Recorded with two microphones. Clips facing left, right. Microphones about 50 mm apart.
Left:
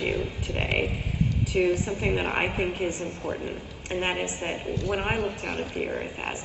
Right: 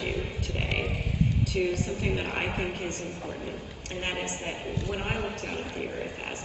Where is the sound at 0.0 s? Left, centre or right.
Left.